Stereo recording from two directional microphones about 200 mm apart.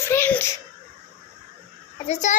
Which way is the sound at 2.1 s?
35° left (ahead or behind).